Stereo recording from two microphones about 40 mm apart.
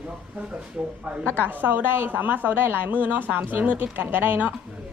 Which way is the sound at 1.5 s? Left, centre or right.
Right.